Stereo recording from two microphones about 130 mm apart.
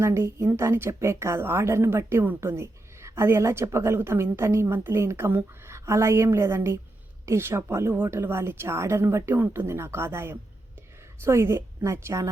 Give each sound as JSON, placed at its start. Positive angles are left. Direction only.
{"t": 0.0, "sound": "a woman's voice", "side_deg": -20}